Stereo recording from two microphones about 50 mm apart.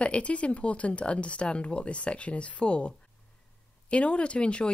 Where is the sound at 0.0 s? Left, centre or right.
Left.